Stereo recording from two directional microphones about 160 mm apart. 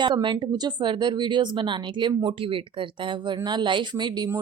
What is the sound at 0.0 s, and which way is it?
Speech, 30° right (ahead or behind).